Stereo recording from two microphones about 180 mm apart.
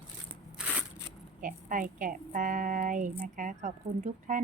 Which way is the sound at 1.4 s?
50° right (ahead or behind).